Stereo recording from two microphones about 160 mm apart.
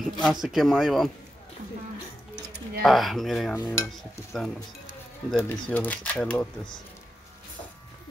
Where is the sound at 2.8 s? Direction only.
Centre (ahead or behind).